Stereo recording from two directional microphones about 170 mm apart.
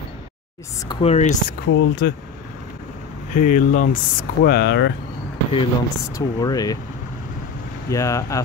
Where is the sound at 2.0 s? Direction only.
70° left (ahead or behind).